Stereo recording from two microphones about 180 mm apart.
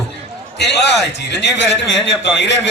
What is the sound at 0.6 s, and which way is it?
A man's voice, 70° left (ahead or behind).